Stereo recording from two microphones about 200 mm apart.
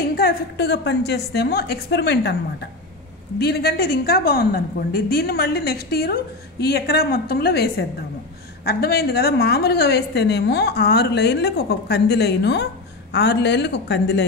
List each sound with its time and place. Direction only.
0.2 s a woman's voice: 55° left (ahead or behind)
3.3 s a woman's voice: 55° left (ahead or behind)